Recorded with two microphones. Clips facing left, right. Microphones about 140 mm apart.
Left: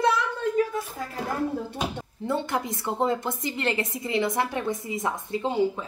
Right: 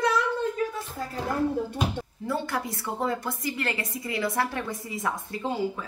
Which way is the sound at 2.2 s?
20° left (ahead or behind).